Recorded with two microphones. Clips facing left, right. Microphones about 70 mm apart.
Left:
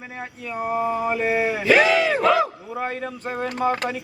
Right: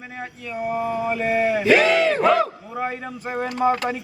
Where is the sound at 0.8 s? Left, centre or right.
Centre.